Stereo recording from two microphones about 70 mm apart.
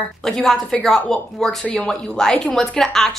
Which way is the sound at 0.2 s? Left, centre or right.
Centre.